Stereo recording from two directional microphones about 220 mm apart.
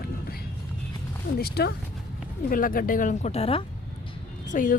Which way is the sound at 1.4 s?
45° left (ahead or behind).